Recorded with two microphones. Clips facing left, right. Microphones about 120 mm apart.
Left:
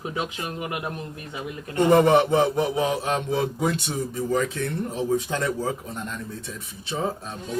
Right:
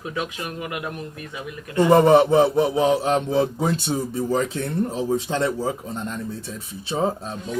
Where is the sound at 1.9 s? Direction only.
30° right (ahead or behind).